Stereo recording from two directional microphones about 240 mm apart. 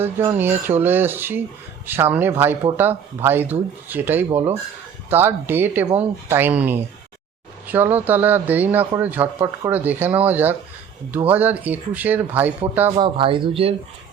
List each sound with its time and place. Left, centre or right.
0.0 s speech: centre
13.0 s speech: right